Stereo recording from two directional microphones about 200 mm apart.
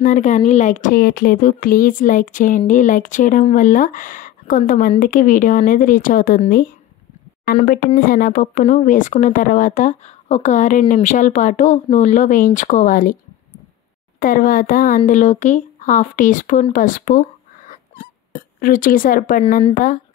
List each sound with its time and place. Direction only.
0.0 s speech: 40° left (ahead or behind)
14.2 s speech: 45° left (ahead or behind)
16.7 s a sound: 40° left (ahead or behind)
19.7 s speech: 40° left (ahead or behind)